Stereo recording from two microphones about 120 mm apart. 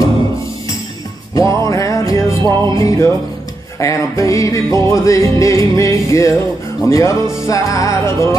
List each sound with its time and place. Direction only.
1.3 s music: 25° left (ahead or behind)
2.4 s music: 40° right (ahead or behind)
2.8 s music: 25° left (ahead or behind)